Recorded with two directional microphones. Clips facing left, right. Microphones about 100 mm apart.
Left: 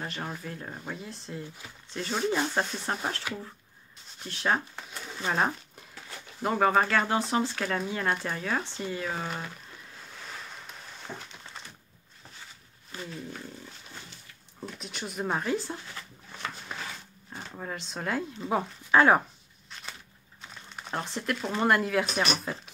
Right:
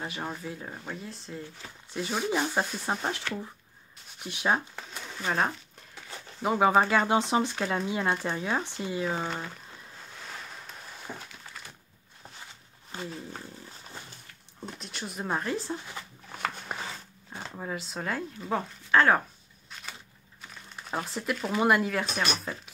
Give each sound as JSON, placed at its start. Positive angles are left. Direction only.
{"t": 0.0, "sound": "speech", "side_deg": -5}
{"t": 3.3, "sound": "speech", "side_deg": 10}
{"t": 4.2, "sound": "speech", "side_deg": -10}
{"t": 5.2, "sound": "speech", "side_deg": 5}
{"t": 6.4, "sound": "speech", "side_deg": -10}
{"t": 11.1, "sound": "speech", "side_deg": -10}
{"t": 11.6, "sound": "a sound", "side_deg": 25}
{"t": 12.9, "sound": "speech", "side_deg": -30}
{"t": 14.8, "sound": "speech", "side_deg": 0}
{"t": 16.7, "sound": "a sound", "side_deg": -50}
{"t": 17.6, "sound": "speech", "side_deg": -5}
{"t": 20.9, "sound": "speech", "side_deg": -5}